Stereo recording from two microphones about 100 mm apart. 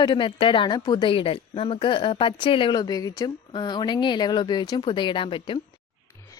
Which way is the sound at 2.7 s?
40° left (ahead or behind).